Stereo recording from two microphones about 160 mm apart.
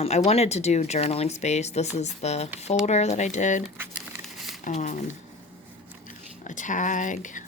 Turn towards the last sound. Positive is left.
turn(degrees=50)  # may be behind; listen again after turning